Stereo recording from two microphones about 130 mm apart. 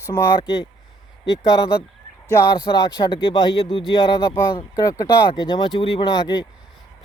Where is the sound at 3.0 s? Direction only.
40° left (ahead or behind).